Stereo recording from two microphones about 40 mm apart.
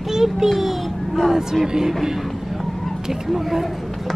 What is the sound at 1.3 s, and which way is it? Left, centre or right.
Speech, centre.